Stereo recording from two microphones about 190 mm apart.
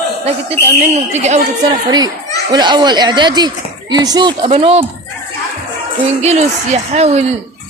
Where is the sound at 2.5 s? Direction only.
25° right (ahead or behind).